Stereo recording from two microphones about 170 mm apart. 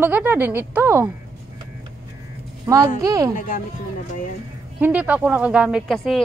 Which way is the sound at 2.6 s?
20° right (ahead or behind).